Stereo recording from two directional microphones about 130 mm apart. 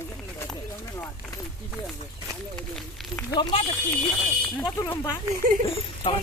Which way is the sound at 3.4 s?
45° left (ahead or behind).